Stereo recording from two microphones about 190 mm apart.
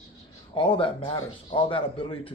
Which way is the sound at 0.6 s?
25° left (ahead or behind).